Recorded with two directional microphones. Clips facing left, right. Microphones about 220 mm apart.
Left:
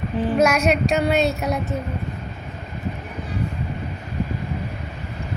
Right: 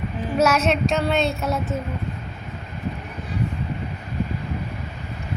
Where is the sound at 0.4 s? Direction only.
10° left (ahead or behind).